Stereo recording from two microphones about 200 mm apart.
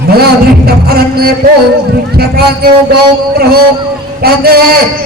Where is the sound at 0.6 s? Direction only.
50° right (ahead or behind).